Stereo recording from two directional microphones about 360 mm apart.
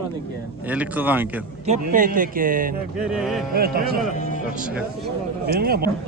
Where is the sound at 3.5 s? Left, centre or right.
Right.